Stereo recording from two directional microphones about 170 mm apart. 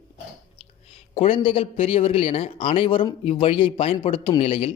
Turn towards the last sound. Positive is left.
turn(degrees=35)  # may be behind; listen again after turning